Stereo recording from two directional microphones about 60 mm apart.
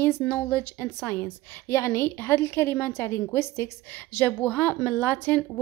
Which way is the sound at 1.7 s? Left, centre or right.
Left.